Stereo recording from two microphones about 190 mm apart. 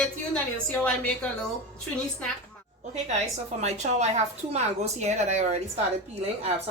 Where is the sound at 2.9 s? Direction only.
35° right (ahead or behind).